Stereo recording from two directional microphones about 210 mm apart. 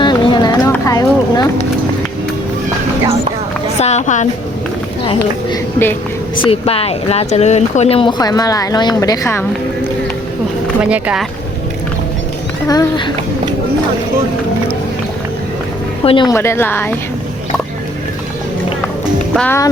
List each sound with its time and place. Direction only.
0.0 s a sound: 20° left (ahead or behind)
3.8 s a sound: 30° left (ahead or behind)
6.4 s speech: 25° left (ahead or behind)
10.8 s speech: 5° right (ahead or behind)
12.6 s speech: 20° left (ahead or behind)
16.0 s a woman's voice: 20° left (ahead or behind)
19.4 s a woman's voice: 10° left (ahead or behind)